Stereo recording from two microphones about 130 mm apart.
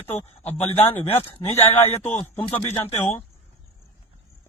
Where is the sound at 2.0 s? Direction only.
15° left (ahead or behind).